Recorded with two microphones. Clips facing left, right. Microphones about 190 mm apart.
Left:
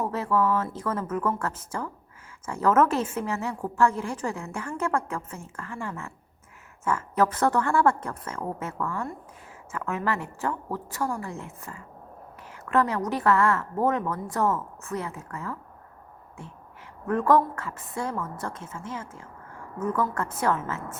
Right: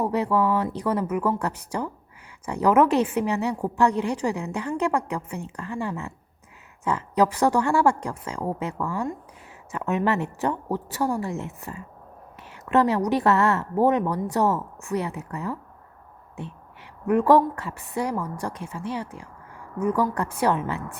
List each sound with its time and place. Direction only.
0.0 s a woman's voice: 15° right (ahead or behind)
17.1 s a woman's voice: 15° right (ahead or behind)